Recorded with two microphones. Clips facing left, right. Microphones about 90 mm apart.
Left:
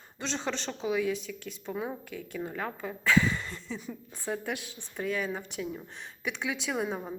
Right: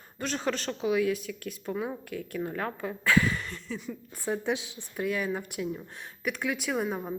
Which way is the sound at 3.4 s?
Centre (ahead or behind).